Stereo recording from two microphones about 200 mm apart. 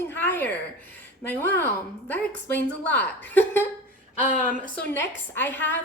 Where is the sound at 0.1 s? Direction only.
10° left (ahead or behind).